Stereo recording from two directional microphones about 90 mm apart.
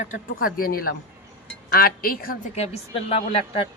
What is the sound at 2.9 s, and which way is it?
Speech, 90° left.